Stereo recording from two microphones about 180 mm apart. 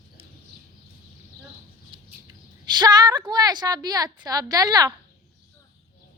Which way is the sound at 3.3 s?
25° right (ahead or behind).